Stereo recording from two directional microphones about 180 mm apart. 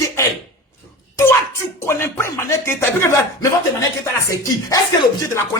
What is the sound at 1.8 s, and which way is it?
Speech, 15° left (ahead or behind).